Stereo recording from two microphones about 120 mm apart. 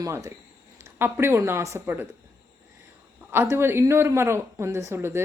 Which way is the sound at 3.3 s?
20° right (ahead or behind).